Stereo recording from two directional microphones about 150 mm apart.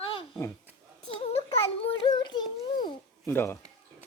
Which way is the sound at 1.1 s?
40° left (ahead or behind).